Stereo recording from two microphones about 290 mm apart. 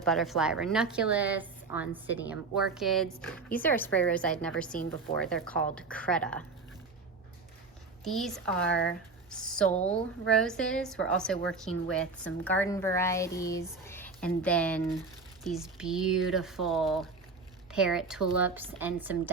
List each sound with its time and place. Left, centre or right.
0.0 s a woman's voice: centre
8.0 s a woman's voice: centre
8.6 s speech: left
9.3 s a woman's voice: centre